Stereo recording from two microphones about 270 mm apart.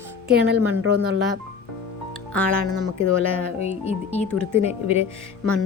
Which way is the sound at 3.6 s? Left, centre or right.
Left.